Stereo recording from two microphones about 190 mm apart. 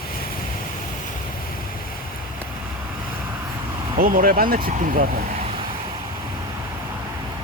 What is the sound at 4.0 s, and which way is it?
Speech, 45° right (ahead or behind).